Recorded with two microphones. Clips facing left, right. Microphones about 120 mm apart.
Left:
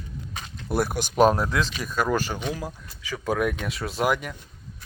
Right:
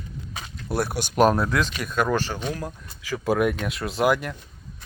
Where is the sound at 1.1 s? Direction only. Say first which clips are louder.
Even; 5° right (ahead or behind).